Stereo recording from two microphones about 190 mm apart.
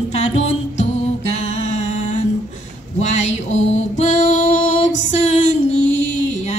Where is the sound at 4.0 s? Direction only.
40° left (ahead or behind).